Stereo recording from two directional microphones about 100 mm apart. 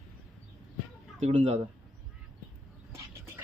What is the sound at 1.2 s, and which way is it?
Speech, 90° right.